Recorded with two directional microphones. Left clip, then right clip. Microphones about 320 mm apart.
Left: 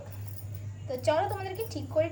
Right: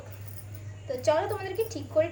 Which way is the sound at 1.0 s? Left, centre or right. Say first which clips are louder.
Right 2 dB; centre.